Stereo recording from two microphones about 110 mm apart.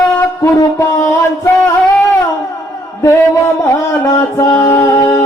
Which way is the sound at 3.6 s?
30° left (ahead or behind).